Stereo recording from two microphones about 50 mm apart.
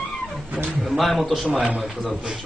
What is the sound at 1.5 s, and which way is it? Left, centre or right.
Speech, centre.